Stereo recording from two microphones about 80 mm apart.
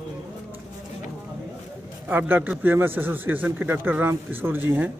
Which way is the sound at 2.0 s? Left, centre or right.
Right.